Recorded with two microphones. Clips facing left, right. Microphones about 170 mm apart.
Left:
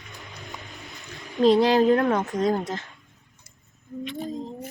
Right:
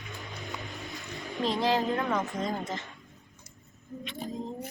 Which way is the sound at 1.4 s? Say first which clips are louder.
Left 10 dB; 75° left (ahead or behind).